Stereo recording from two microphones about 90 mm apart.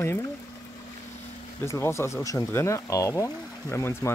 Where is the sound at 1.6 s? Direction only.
30° left (ahead or behind).